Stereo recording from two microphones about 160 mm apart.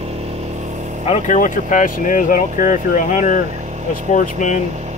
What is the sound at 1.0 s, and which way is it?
Speech, 45° left (ahead or behind).